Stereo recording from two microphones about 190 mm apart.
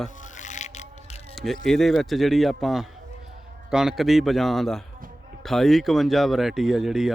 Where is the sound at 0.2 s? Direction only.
40° left (ahead or behind).